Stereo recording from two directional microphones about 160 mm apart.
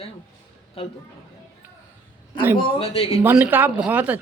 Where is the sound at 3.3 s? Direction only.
10° right (ahead or behind).